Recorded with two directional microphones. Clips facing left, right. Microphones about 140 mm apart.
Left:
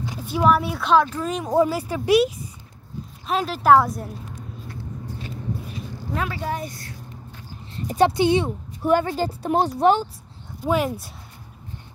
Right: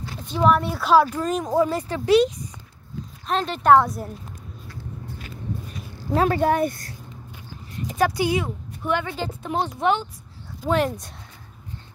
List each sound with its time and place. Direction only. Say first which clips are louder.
0.0 s speech: even; 10° left (ahead or behind); by 1.2 s 5° right (ahead or behind)
1.2 s a woman's voice: left 1 dB; 5° left (ahead or behind)
6.1 s speech: right 8 dB; 45° right (ahead or behind)
7.9 s speech: left 4 dB; 25° left (ahead or behind)
8.8 s speech: left 5 dB; 40° left (ahead or behind)
10.6 s a woman's voice: even; 5° left (ahead or behind)